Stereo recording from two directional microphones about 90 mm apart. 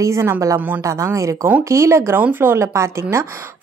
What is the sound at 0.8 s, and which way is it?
Speech, 35° right (ahead or behind).